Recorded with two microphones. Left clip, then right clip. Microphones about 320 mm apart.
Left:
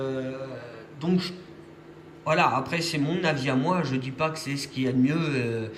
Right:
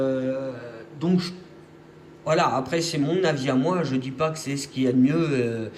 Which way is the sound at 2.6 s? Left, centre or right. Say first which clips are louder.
Right 3 dB; centre.